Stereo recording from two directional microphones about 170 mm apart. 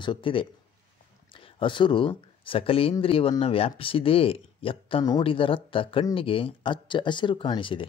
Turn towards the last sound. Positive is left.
turn(degrees=30)  # may be behind; listen again after turning